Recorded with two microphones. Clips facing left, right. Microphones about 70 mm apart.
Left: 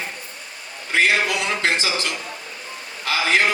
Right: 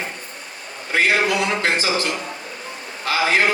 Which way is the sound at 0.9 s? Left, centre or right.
Right.